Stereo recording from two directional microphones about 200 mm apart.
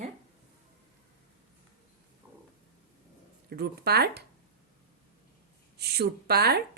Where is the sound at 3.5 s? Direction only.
55° right (ahead or behind).